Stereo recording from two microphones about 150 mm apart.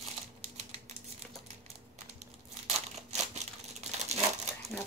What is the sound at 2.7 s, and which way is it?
Crushing, 45° right (ahead or behind).